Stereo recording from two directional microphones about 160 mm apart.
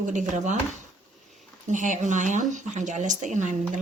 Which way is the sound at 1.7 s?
50° right (ahead or behind).